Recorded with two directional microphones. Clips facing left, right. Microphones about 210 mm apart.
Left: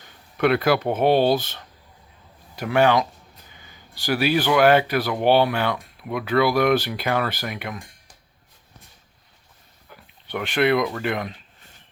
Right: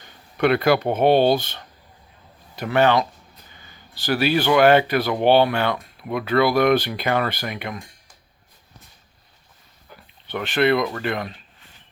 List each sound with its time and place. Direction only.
0.3 s speech: centre (ahead or behind)
9.9 s a sound: 10° left (ahead or behind)
10.8 s speech: 5° left (ahead or behind)